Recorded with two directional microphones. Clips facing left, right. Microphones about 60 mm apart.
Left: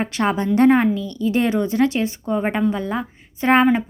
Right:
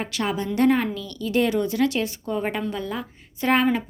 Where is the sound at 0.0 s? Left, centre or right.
Left.